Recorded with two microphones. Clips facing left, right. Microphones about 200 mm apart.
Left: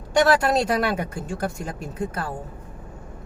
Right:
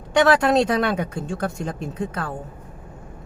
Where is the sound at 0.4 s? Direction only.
5° left (ahead or behind).